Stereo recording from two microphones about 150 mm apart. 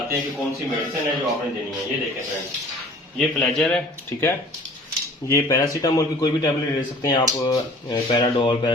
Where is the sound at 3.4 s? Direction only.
5° left (ahead or behind).